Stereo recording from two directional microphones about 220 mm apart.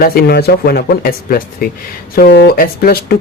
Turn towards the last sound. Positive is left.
turn(degrees=40)  # may be behind; listen again after turning